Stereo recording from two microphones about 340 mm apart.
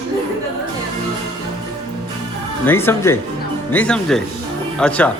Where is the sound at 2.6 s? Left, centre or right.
Centre.